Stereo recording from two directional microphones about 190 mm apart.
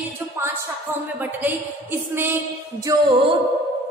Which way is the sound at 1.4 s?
10° right (ahead or behind).